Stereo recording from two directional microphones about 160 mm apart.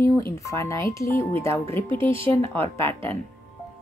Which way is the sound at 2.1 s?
35° right (ahead or behind).